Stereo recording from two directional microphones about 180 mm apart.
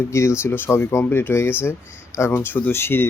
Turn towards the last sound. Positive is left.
turn(degrees=10)  # may be behind; listen again after turning